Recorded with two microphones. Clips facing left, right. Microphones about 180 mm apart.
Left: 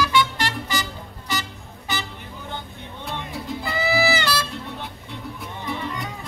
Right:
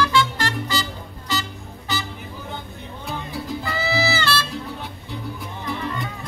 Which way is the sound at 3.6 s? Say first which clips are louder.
Left 3 dB; 15° left (ahead or behind).